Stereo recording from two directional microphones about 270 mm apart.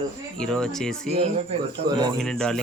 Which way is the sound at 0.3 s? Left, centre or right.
Centre.